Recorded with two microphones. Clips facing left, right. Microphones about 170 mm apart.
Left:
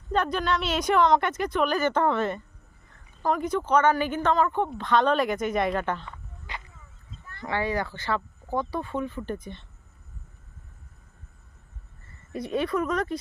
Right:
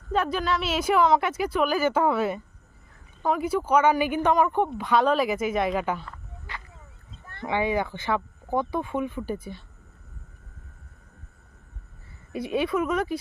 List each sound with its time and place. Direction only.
0.1 s a woman's voice: 5° right (ahead or behind)
6.5 s a sound: 15° left (ahead or behind)
7.4 s speech: 15° right (ahead or behind)
12.3 s a woman's voice: 5° right (ahead or behind)